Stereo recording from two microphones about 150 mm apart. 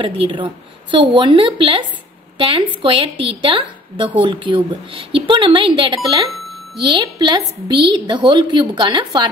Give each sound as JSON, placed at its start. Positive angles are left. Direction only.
{"t": 0.0, "sound": "a woman's voice", "side_deg": -35}